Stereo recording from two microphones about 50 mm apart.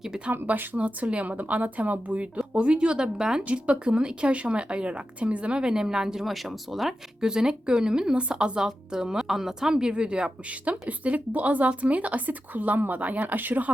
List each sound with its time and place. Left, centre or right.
0.4 s speech: right; by 3.4 s centre
3.4 s speech: right